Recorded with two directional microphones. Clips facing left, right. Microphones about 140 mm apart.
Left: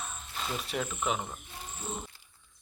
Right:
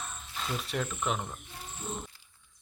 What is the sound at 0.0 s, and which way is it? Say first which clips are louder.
Cricket: left 1 dB; centre (ahead or behind).